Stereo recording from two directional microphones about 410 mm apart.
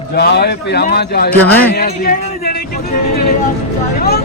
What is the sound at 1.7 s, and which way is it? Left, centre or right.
Speech, left.